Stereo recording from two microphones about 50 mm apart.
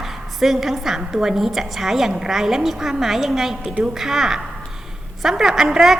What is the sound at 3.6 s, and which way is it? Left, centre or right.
Speech, right.